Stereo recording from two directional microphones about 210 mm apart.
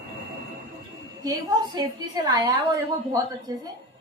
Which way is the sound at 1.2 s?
20° right (ahead or behind).